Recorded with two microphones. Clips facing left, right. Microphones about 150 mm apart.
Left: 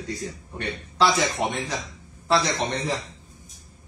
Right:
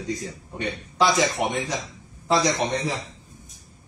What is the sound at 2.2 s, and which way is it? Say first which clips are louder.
Speech: right 1 dB; 15° right (ahead or behind).